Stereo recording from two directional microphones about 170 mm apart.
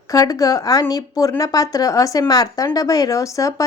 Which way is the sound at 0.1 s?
20° left (ahead or behind).